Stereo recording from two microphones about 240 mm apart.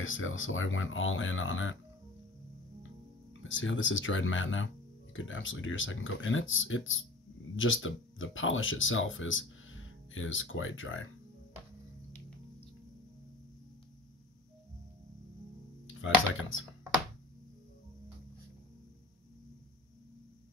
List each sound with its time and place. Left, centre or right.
0.0 s speech: left
3.4 s speech: left
16.0 s speech: left